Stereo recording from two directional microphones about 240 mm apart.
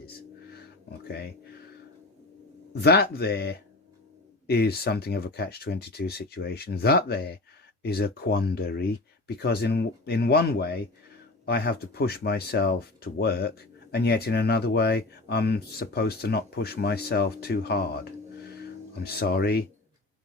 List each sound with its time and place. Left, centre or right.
2.7 s speech: left